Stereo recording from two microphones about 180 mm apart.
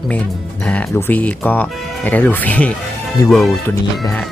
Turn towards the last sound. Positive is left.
turn(degrees=0)  # may be behind; listen again after turning